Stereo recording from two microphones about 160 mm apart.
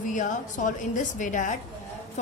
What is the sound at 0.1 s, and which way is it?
Speech, 50° left (ahead or behind).